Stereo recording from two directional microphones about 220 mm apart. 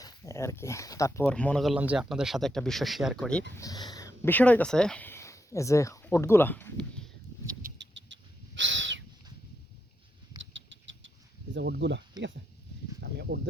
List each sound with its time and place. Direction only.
0.0 s speech: 15° left (ahead or behind)
3.5 s speech: 15° left (ahead or behind)
7.6 s owl: 55° right (ahead or behind)
10.3 s rodents: 60° right (ahead or behind)
11.5 s speech: 55° right (ahead or behind)